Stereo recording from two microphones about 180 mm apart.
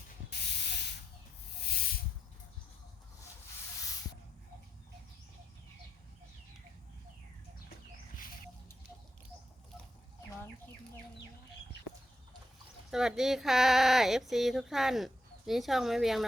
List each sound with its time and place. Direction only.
0.3 s spray: 65° left (ahead or behind)
12.9 s speech: 5° right (ahead or behind)